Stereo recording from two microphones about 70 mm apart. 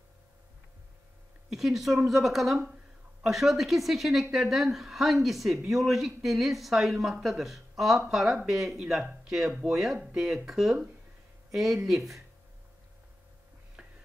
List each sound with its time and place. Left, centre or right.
1.5 s speech: centre
9.5 s speech: centre